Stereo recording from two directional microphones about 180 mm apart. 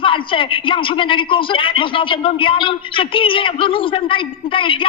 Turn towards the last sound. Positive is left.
turn(degrees=30)  # may be behind; listen again after turning